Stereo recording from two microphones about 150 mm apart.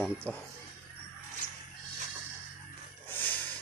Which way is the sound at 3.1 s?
10° left (ahead or behind).